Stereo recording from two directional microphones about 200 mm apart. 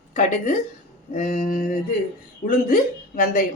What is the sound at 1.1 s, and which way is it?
Speech, 35° left (ahead or behind).